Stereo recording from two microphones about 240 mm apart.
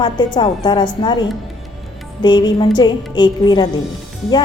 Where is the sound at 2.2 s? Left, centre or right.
Centre.